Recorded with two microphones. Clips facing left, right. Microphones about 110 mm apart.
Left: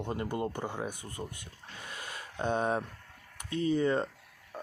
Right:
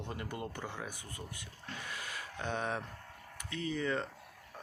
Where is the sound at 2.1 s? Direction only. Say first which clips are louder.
Left 8 dB; 20° left (ahead or behind).